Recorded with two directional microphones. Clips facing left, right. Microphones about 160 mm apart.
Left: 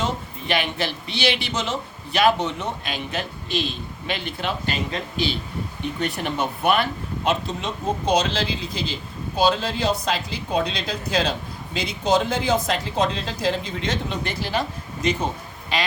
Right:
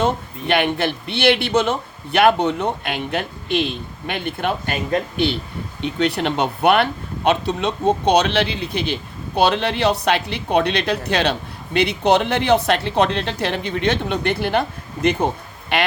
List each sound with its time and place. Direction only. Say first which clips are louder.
0.0 s a man's voice: right 6 dB; 60° right (ahead or behind)
5.8 s a man's voice: right 7 dB; 70° right (ahead or behind)